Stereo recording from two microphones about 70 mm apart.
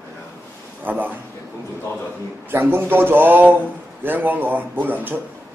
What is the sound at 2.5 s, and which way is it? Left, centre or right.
Speech, right.